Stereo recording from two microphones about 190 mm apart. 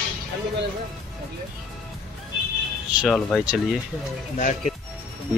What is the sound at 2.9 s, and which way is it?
Speech, centre (ahead or behind).